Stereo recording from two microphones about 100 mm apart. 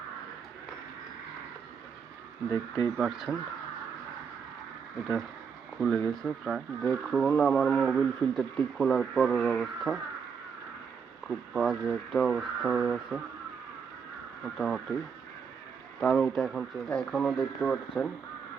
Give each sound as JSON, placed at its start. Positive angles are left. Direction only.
{"t": 2.5, "sound": "speech", "side_deg": 40}
{"t": 3.0, "sound": "speech", "side_deg": -5}
{"t": 5.7, "sound": "speech", "side_deg": 0}
{"t": 11.3, "sound": "speech", "side_deg": -5}
{"t": 14.6, "sound": "speech", "side_deg": 0}
{"t": 16.0, "sound": "speech", "side_deg": 5}
{"t": 16.9, "sound": "speech", "side_deg": 10}